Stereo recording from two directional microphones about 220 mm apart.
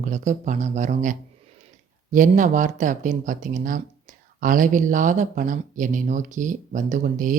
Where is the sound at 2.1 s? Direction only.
35° right (ahead or behind).